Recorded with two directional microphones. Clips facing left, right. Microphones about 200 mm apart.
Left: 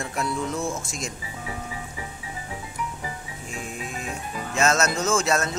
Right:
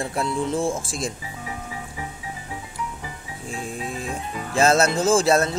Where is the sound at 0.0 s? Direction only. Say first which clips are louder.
Right 3 dB; 30° right (ahead or behind).